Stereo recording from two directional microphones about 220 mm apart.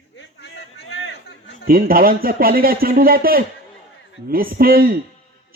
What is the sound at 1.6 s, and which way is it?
Speech, 40° right (ahead or behind).